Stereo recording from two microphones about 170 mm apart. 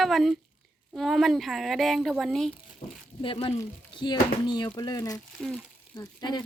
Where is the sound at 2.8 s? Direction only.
25° left (ahead or behind).